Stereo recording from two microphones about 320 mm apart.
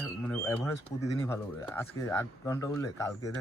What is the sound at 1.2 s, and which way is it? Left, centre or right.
Speech, centre.